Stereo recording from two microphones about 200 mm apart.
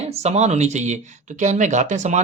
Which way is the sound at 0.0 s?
30° right (ahead or behind).